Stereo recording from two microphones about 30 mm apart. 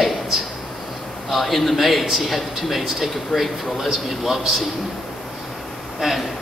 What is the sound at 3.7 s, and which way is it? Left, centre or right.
Speech, centre.